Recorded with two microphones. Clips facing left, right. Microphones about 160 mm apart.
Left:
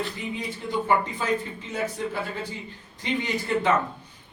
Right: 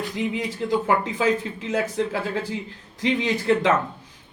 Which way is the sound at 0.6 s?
70° right (ahead or behind).